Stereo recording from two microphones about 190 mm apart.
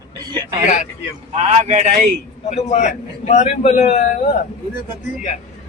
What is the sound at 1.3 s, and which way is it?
Speech, 35° right (ahead or behind).